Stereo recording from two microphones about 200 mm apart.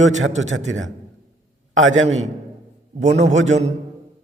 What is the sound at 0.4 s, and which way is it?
A man's voice, 75° right (ahead or behind).